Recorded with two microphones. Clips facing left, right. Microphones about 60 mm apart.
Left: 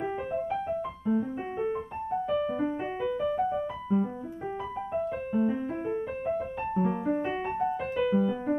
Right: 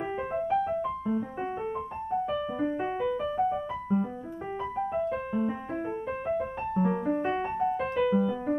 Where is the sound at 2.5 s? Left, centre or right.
Centre.